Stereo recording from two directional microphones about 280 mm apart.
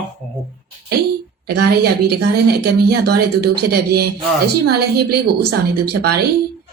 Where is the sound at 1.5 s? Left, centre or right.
Right.